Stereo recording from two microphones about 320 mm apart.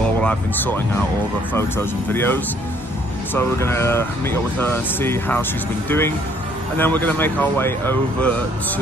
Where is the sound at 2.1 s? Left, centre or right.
Centre.